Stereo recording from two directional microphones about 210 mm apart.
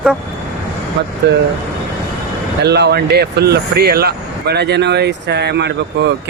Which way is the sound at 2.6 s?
50° right (ahead or behind).